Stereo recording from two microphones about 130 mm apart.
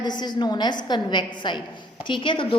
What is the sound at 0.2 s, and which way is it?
A woman's voice, 35° left (ahead or behind).